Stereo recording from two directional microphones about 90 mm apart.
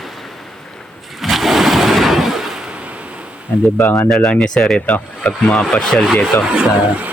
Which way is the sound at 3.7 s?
25° left (ahead or behind).